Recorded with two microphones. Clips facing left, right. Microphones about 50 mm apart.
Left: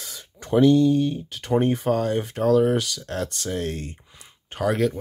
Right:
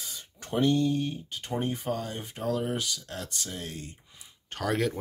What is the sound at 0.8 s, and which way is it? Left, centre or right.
Speech, left.